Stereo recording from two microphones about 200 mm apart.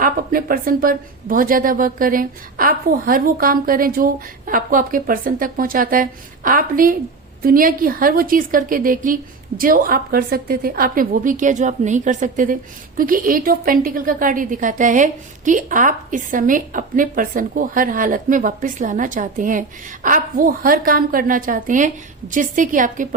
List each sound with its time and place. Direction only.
0.0 s a woman's voice: 45° right (ahead or behind)